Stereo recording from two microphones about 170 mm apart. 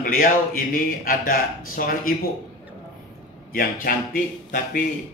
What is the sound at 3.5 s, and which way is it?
A man's voice, 55° left (ahead or behind).